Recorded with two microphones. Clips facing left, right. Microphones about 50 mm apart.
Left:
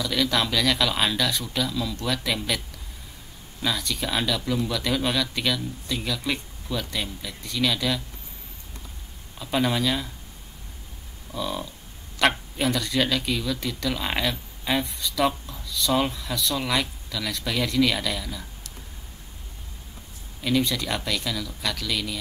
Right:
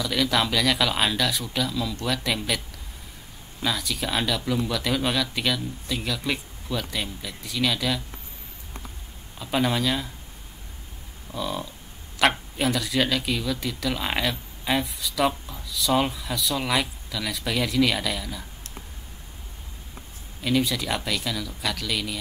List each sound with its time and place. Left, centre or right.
0.0 s speech: centre
3.6 s speech: centre
9.4 s speech: centre
11.3 s speech: centre
20.4 s speech: centre